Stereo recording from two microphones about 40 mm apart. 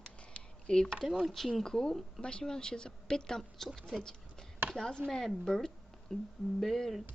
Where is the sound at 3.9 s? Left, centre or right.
Centre.